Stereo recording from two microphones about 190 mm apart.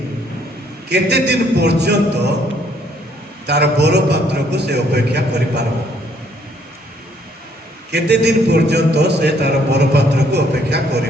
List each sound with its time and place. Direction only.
0.9 s a man's voice: 60° right (ahead or behind)
3.4 s a man's voice: 60° right (ahead or behind)
7.9 s a man's voice: 60° right (ahead or behind)